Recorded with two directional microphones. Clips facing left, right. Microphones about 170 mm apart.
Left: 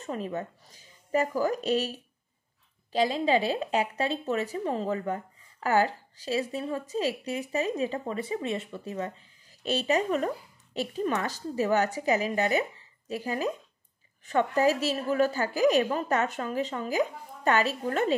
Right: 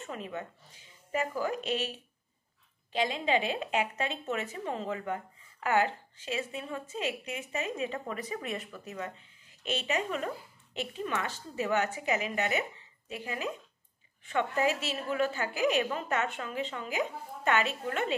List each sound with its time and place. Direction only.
0.0 s speech: 35° left (ahead or behind)